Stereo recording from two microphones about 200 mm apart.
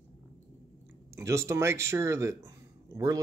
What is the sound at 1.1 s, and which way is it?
Speech, 15° right (ahead or behind).